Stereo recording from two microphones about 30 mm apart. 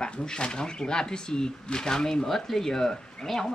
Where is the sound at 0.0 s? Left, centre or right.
Left.